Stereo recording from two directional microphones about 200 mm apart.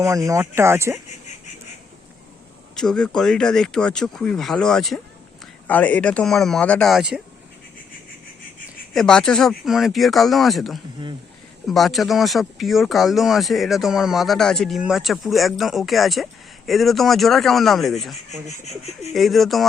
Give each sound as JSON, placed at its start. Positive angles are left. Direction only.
{"t": 0.0, "sound": "speech", "side_deg": -15}
{"t": 2.7, "sound": "speech", "side_deg": 5}
{"t": 8.9, "sound": "speech", "side_deg": 5}
{"t": 18.5, "sound": "speech", "side_deg": 35}
{"t": 19.1, "sound": "speech", "side_deg": 0}